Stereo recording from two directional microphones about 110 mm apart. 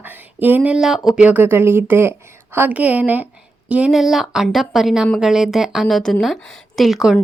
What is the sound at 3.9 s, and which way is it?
Speech, centre (ahead or behind).